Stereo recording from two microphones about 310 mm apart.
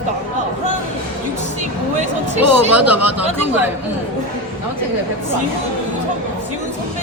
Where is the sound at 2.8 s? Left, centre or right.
Right.